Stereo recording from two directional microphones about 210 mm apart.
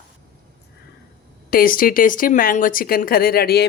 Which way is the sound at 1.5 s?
40° left (ahead or behind).